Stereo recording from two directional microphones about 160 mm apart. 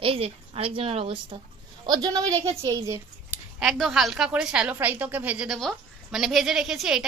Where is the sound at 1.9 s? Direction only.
25° right (ahead or behind).